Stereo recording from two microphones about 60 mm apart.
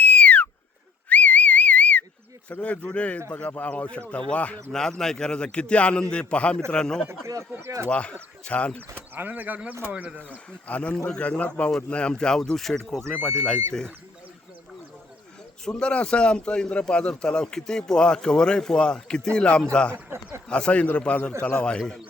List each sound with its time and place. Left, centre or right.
0.0 s a sound: left
1.1 s whistle: left
2.5 s speech: left
4.7 s a man's voice: centre
7.5 s speech: right
7.9 s speech: centre
9.1 s speech: right
9.9 s speech: centre
10.2 s a man's voice: left; by 13.1 s centre
13.1 s a man's voice: centre
15.6 s a man's voice: centre
19.9 s speech: right
20.5 s a man's voice: centre